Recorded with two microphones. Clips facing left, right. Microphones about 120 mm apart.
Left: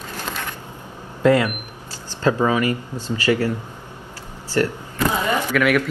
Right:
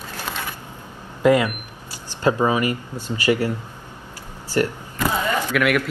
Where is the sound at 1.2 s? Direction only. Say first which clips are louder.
Even; 15° right (ahead or behind).